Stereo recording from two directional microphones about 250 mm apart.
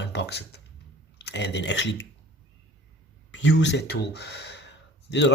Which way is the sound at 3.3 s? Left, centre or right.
Left.